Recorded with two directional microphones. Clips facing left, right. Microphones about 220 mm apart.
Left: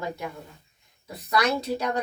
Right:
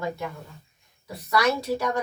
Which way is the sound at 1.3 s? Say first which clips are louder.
Right 1 dB; 20° left (ahead or behind).